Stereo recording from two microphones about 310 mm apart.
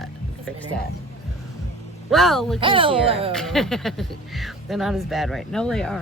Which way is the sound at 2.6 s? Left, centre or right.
Centre.